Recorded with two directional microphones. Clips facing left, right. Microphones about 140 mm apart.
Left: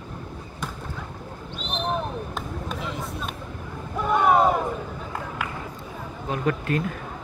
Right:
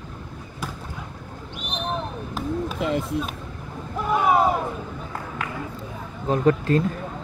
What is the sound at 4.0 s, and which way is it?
Boat, 5° right (ahead or behind).